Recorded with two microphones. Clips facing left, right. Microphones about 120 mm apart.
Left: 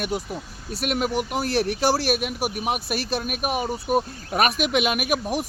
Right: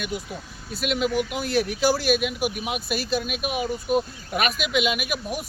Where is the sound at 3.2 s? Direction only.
45° left (ahead or behind).